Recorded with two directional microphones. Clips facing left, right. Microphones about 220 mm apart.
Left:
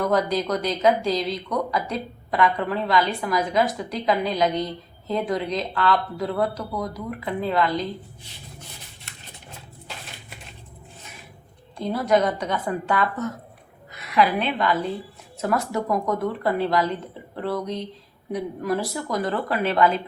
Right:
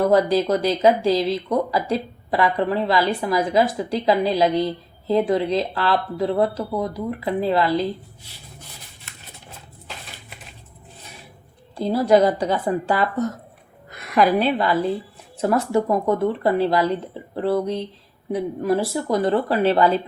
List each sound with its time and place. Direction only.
0.0 s speech: 30° right (ahead or behind)
11.8 s a woman's voice: 30° right (ahead or behind)
13.9 s a woman's voice: 50° right (ahead or behind); by 20.0 s 30° right (ahead or behind)